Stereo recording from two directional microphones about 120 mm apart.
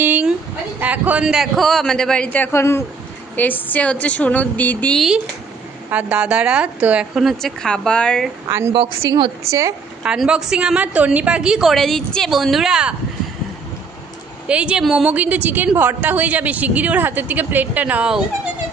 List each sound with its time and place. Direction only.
0.0 s a sound: 15° right (ahead or behind)
0.7 s a man's voice: 15° right (ahead or behind); by 5.0 s 10° left (ahead or behind)
5.0 s a man's voice: 5° right (ahead or behind)
5.9 s a woman's voice: 15° right (ahead or behind); by 8.3 s 5° left (ahead or behind)
8.5 s speech: 20° right (ahead or behind)
10.0 s a woman's voice: 5° right (ahead or behind)
14.5 s a woman's voice: 10° right (ahead or behind)